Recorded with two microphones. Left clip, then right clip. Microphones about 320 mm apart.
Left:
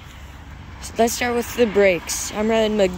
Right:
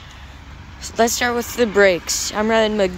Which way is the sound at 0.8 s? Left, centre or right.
Centre.